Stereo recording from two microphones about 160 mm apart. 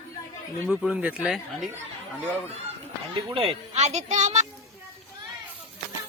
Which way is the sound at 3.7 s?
45° right (ahead or behind).